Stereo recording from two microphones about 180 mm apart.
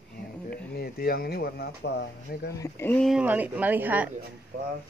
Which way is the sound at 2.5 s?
15° left (ahead or behind).